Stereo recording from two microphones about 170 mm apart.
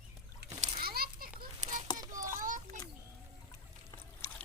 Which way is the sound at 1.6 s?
45° right (ahead or behind).